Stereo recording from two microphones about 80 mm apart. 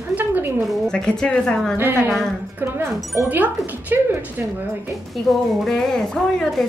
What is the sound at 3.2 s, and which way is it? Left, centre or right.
A woman's voice, right.